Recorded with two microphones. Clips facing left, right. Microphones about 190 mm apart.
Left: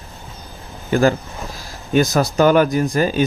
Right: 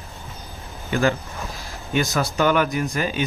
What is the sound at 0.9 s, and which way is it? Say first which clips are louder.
Speech: left 5 dB; 40° left (ahead or behind).